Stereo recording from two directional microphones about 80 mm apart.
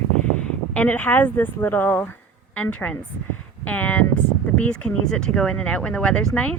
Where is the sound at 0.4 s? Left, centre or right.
Centre.